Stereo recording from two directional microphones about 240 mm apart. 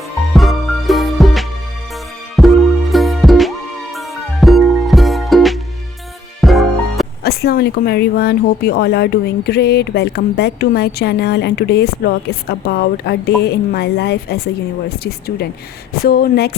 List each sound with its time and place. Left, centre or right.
0.3 s music: centre
7.2 s a woman's voice: left
16.0 s speech: left